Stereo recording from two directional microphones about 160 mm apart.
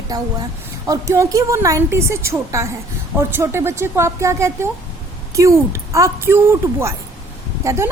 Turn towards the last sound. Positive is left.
turn(degrees=-20)  # may be behind; listen again after turning